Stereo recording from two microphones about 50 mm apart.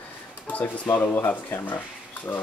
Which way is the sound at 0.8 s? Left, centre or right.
Left.